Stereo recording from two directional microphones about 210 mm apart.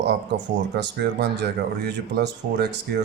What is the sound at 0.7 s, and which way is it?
Speech, 55° right (ahead or behind).